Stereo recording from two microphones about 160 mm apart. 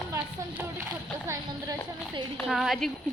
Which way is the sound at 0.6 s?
15° right (ahead or behind).